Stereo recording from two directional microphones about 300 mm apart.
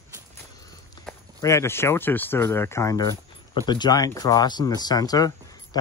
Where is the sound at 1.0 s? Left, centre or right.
Centre.